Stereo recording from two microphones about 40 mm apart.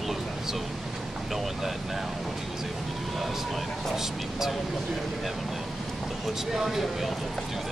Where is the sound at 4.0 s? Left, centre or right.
Centre.